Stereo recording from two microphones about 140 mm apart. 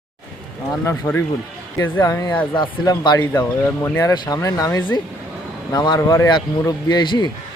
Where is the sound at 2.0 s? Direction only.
25° left (ahead or behind).